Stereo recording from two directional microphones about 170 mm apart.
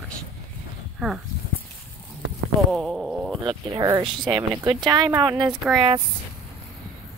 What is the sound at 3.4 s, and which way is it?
Speech, 25° right (ahead or behind).